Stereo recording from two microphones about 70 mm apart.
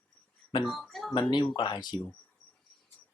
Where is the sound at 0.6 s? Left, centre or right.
Centre.